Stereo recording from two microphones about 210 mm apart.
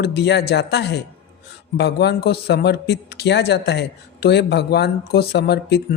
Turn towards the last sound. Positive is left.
turn(degrees=50)  # may be behind; listen again after turning